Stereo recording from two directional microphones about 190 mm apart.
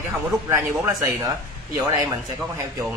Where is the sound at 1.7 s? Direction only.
15° right (ahead or behind).